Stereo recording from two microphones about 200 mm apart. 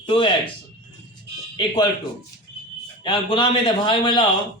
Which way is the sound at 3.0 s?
25° left (ahead or behind).